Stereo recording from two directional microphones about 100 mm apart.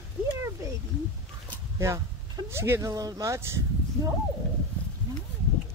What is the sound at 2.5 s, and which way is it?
Speech, 25° right (ahead or behind).